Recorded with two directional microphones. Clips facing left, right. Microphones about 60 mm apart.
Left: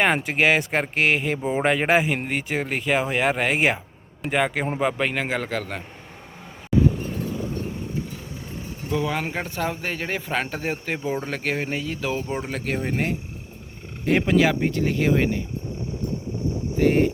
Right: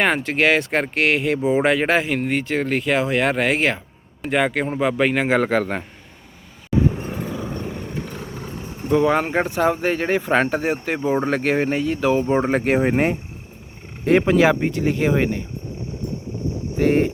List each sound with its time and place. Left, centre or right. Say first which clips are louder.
0.0 s speech: right 2 dB; centre
1.7 s speech: right 1 dB; centre
5.3 s speech: right 8 dB; centre
7.7 s vehicle: right 1 dB; right
8.9 s speech: right 8 dB; right; by 11.0 s centre
11.0 s speech: right 8 dB; right
11.3 s speech: right 7 dB; centre
12.3 s speech: right 10 dB; right
12.6 s speech: right 9 dB; right
12.9 s speech: right 6 dB; right
14.0 s speech: right 4 dB; centre
16.7 s speech: right 2 dB; centre